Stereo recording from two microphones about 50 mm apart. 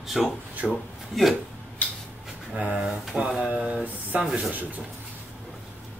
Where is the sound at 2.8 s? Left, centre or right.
Centre.